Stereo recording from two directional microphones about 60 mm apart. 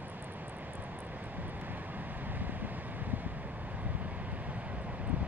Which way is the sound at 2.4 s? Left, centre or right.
Right.